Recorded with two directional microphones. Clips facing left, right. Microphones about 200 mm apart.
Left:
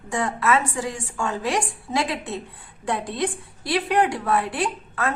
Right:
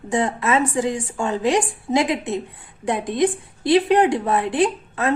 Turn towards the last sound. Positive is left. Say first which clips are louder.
# right 6 dB
turn(degrees=-20)  # may be behind; listen again after turning